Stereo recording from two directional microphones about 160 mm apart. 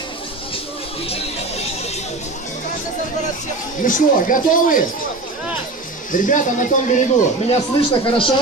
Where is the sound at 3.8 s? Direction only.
55° left (ahead or behind).